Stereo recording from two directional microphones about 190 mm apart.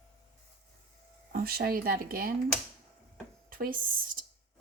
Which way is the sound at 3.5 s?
50° right (ahead or behind).